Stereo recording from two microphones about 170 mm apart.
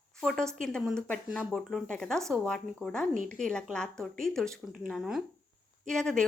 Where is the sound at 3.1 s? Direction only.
50° right (ahead or behind).